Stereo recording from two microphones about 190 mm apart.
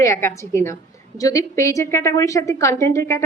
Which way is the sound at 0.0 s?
15° left (ahead or behind).